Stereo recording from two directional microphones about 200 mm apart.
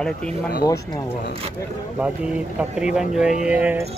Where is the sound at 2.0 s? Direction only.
5° right (ahead or behind).